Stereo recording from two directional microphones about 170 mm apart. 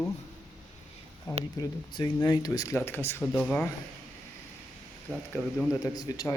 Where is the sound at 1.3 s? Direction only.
25° left (ahead or behind); by 3.7 s 10° left (ahead or behind).